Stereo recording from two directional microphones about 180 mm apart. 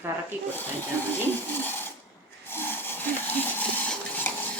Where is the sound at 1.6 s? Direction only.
10° left (ahead or behind).